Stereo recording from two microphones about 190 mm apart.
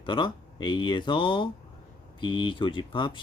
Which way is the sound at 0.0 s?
25° left (ahead or behind).